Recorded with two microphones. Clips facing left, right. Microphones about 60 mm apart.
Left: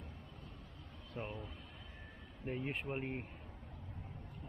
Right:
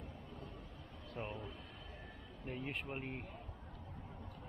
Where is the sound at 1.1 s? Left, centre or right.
Centre.